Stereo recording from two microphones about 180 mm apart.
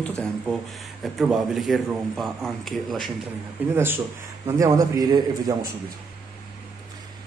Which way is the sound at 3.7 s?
10° right (ahead or behind).